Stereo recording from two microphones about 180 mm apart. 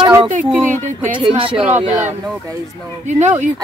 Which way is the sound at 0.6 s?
45° right (ahead or behind).